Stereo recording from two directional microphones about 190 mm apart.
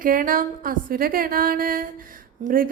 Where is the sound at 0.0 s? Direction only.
45° right (ahead or behind).